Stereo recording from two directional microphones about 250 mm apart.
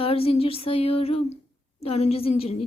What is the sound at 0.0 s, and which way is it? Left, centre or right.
A woman's voice, left.